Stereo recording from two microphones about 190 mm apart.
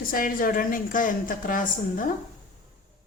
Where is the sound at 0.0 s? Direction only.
50° left (ahead or behind).